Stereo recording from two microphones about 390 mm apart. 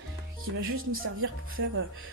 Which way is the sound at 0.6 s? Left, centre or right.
Right.